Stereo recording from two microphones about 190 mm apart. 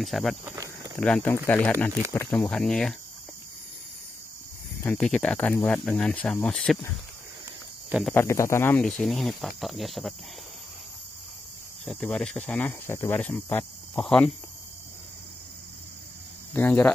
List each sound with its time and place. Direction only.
0.0 s speech: centre (ahead or behind)
0.5 s cricket: 15° right (ahead or behind)
0.9 s speech: 5° left (ahead or behind)
4.8 s speech: 5° left (ahead or behind)
8.1 s speech: 15° left (ahead or behind)
11.8 s speech: 5° left (ahead or behind)
16.5 s speech: 10° left (ahead or behind)